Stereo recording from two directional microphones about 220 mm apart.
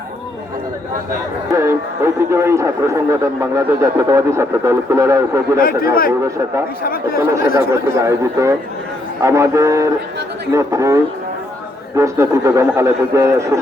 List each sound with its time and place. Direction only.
1.5 s a man's voice: 15° right (ahead or behind)
5.5 s a man's voice: 40° left (ahead or behind)
7.2 s a man's voice: 15° right (ahead or behind)